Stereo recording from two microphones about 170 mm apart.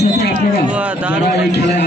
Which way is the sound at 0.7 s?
10° right (ahead or behind).